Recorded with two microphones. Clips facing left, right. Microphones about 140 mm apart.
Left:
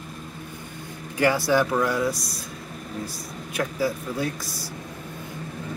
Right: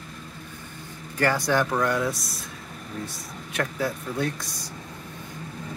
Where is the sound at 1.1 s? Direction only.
10° left (ahead or behind).